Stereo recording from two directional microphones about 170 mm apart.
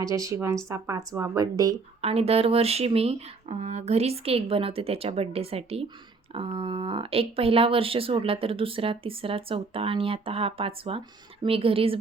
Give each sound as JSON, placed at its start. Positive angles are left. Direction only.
{"t": 0.0, "sound": "speech", "side_deg": -20}
{"t": 2.0, "sound": "speech", "side_deg": -35}